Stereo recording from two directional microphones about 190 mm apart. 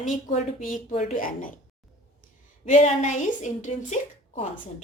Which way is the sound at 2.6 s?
40° left (ahead or behind).